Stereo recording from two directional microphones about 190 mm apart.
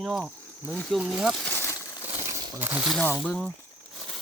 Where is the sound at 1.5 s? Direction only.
15° left (ahead or behind).